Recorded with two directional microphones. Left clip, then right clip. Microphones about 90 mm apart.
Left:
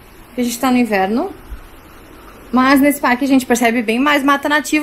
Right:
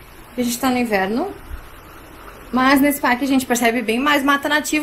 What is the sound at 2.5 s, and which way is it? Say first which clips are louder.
A woman's voice: left 3 dB; 15° left (ahead or behind).